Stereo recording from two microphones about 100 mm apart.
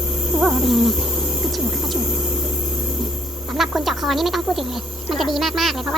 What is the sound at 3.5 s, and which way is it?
Speech, 5° right (ahead or behind).